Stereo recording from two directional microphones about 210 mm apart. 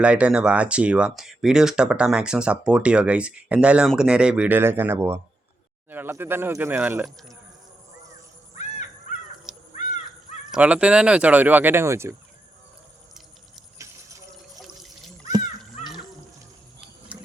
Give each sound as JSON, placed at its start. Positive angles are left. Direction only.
{"t": 0.0, "sound": "speech", "side_deg": -5}
{"t": 8.5, "sound": "crow", "side_deg": 35}
{"t": 9.5, "sound": "crow", "side_deg": -5}
{"t": 10.5, "sound": "speech", "side_deg": -5}
{"t": 17.1, "sound": "ratchet", "side_deg": -5}